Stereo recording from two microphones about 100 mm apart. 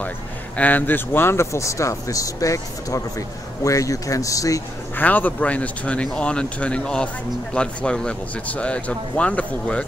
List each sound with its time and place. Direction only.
0.6 s speech: 15° left (ahead or behind); by 4.6 s 35° left (ahead or behind)
4.9 s speech: 15° left (ahead or behind)